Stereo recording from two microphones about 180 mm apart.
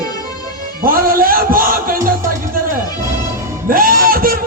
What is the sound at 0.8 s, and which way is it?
A man's voice, 55° right (ahead or behind).